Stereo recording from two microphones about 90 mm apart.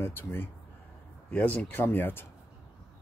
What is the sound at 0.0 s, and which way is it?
Speech, 25° left (ahead or behind).